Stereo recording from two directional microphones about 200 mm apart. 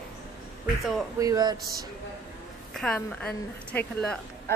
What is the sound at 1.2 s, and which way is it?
Speech, 20° right (ahead or behind).